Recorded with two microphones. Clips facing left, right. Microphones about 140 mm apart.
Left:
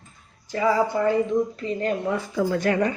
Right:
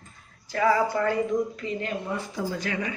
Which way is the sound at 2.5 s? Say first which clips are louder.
Left 11 dB; 55° left (ahead or behind).